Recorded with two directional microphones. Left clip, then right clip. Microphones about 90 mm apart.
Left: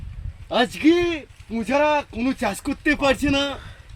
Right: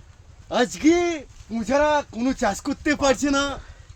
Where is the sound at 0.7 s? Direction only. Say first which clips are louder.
Left 1 dB; 40° right (ahead or behind).